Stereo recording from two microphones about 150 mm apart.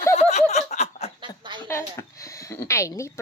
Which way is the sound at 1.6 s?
20° left (ahead or behind).